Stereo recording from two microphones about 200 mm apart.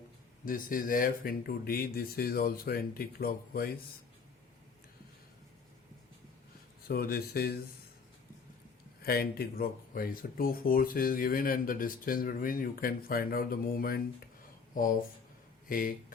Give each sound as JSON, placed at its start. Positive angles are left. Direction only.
{"t": 0.4, "sound": "speech", "side_deg": 45}
{"t": 6.8, "sound": "speech", "side_deg": 50}
{"t": 9.0, "sound": "speech", "side_deg": 50}
{"t": 15.7, "sound": "speech", "side_deg": 45}